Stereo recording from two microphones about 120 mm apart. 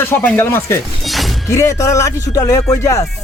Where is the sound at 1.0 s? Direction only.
Centre (ahead or behind).